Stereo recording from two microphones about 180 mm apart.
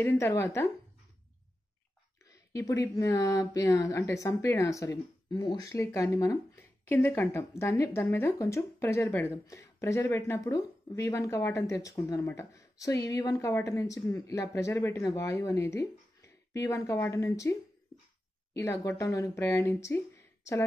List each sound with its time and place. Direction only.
0.0 s speech: 15° left (ahead or behind)
2.2 s speech: 20° left (ahead or behind)